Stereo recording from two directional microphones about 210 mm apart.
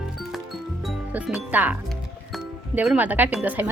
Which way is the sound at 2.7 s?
5° right (ahead or behind).